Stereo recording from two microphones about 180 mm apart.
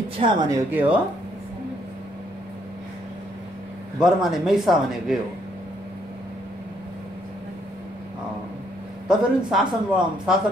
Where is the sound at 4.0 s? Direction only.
Centre (ahead or behind).